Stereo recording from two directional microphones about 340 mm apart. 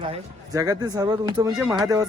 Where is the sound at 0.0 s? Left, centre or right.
Centre.